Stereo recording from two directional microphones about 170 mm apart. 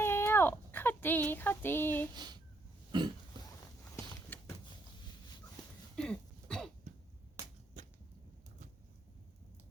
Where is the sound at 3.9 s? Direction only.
15° left (ahead or behind).